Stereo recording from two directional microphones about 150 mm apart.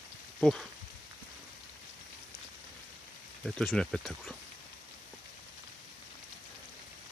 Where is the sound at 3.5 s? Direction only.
5° left (ahead or behind).